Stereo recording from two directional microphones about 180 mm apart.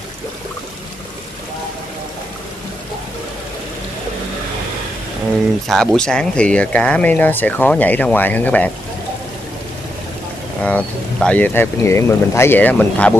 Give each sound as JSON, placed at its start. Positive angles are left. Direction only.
{"t": 5.7, "sound": "speech", "side_deg": 0}
{"t": 10.6, "sound": "speech", "side_deg": 5}